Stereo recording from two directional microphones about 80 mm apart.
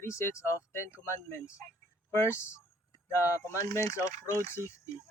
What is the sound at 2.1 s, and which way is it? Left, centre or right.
Speech, left.